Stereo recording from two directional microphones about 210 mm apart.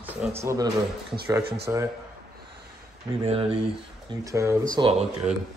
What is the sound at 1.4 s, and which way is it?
Speech, 50° right (ahead or behind).